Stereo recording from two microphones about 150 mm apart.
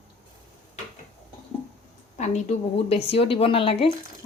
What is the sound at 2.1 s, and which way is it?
A woman's voice, 50° left (ahead or behind).